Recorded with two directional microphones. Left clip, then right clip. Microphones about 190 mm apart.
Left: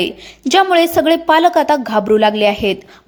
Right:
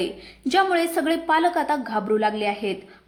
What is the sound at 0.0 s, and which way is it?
A woman's voice, 30° left (ahead or behind).